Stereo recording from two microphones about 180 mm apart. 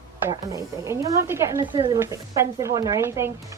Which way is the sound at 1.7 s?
25° right (ahead or behind).